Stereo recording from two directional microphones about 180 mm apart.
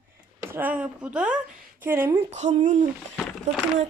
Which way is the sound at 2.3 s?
40° right (ahead or behind).